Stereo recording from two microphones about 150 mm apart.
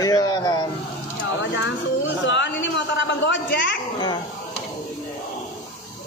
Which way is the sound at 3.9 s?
30° left (ahead or behind).